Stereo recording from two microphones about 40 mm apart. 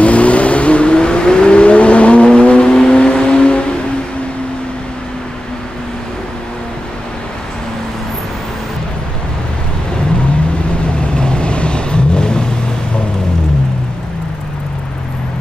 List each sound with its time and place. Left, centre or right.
0.0 s vehicle: left
11.1 s vehicle: left